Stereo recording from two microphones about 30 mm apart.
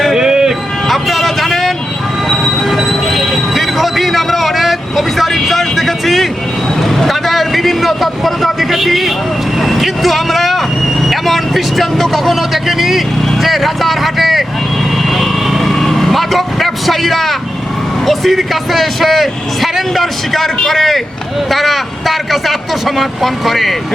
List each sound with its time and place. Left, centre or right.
0.1 s music: centre
0.9 s vehicle: centre
2.3 s train: centre
6.8 s vehicle: centre
18.3 s speech: centre